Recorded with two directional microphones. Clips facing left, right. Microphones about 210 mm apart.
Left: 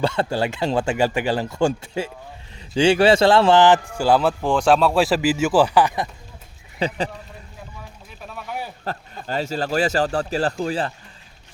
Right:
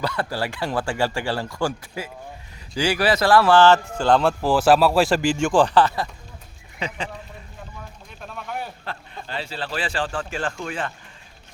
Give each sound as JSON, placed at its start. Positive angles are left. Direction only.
{"t": 0.0, "sound": "speech", "side_deg": 25}
{"t": 6.7, "sound": "speech", "side_deg": 35}
{"t": 8.2, "sound": "a sound", "side_deg": 5}
{"t": 9.2, "sound": "speech", "side_deg": 45}